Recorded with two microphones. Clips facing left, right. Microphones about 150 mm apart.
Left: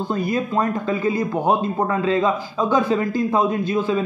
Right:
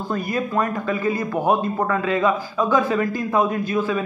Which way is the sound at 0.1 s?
25° left (ahead or behind).